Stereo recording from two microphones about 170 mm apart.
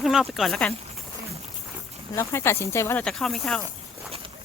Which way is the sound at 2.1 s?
15° left (ahead or behind).